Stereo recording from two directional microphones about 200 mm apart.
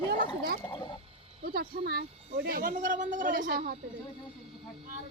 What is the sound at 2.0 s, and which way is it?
Speech, 30° right (ahead or behind).